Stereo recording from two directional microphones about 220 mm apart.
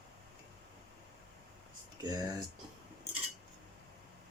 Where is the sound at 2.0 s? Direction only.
15° right (ahead or behind).